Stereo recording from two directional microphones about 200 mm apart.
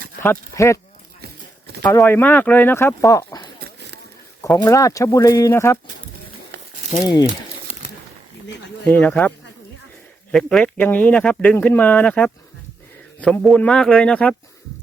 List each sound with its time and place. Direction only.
0.2 s speech: 15° left (ahead or behind)
1.2 s a sound: 55° right (ahead or behind)
1.8 s speech: 10° left (ahead or behind)
3.6 s a sound: 60° right (ahead or behind)
4.4 s speech: 15° left (ahead or behind)
7.0 s speech: 20° left (ahead or behind)
8.4 s a sound: 60° left (ahead or behind)
8.8 s speech: 10° left (ahead or behind)
10.3 s a man's voice: 5° left (ahead or behind)